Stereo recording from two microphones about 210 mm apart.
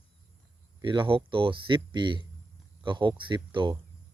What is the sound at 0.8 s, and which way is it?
Speech, 25° right (ahead or behind).